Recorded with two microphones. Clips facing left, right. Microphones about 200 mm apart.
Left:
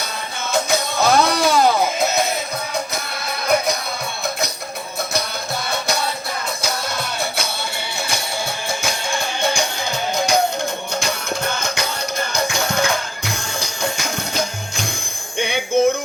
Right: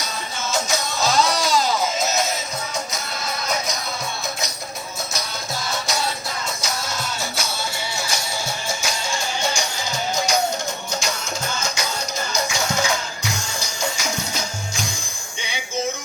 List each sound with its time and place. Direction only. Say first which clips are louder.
0.5 s music: left 5 dB; 60° left (ahead or behind)
6.6 s music: left 3 dB; 60° left (ahead or behind)